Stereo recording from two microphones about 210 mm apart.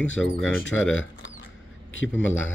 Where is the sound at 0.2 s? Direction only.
65° left (ahead or behind).